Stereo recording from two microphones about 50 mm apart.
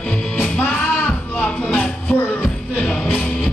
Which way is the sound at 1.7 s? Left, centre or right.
Left.